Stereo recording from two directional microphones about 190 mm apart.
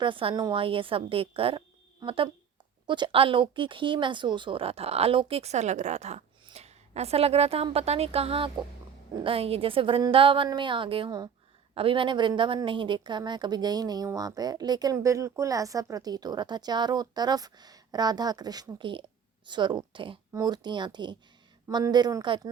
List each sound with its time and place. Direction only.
0.0 s a woman's voice: 25° right (ahead or behind)